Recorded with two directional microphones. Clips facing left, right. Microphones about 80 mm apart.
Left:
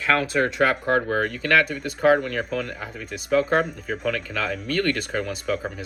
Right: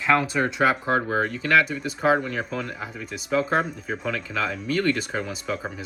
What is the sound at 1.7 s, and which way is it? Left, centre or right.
Speech, centre.